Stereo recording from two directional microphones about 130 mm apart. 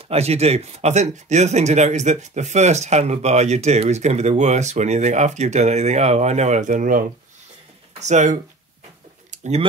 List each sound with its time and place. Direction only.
0.0 s speech: 55° right (ahead or behind); by 7.1 s 85° right
8.0 s speech: 70° right (ahead or behind)
9.3 s a sound: 65° right (ahead or behind)